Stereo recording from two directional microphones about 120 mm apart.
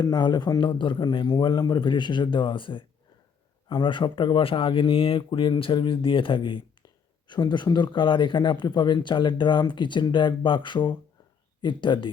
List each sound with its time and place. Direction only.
0.0 s speech: 35° left (ahead or behind)